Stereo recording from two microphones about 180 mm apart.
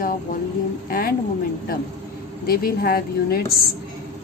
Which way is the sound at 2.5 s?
55° left (ahead or behind).